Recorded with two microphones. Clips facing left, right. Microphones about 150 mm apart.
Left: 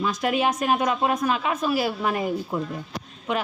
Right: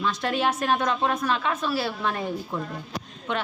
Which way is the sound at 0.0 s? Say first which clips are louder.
Left 2 dB; 5° left (ahead or behind).